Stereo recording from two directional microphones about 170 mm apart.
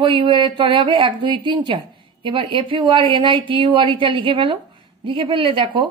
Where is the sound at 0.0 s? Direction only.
30° right (ahead or behind).